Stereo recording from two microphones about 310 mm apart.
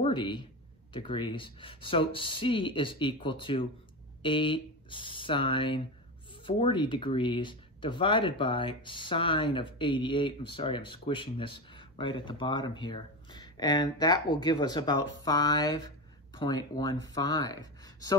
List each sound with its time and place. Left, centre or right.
0.0 s speech: centre